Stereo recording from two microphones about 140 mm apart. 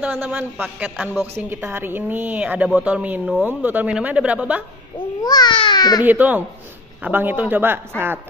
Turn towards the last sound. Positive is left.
turn(degrees=-15)  # may be behind; listen again after turning